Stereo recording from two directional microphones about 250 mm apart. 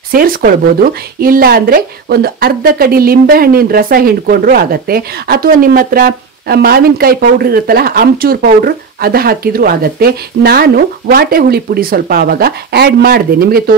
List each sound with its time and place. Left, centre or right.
0.1 s speech: right